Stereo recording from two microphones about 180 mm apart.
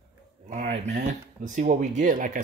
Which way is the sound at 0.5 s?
40° right (ahead or behind).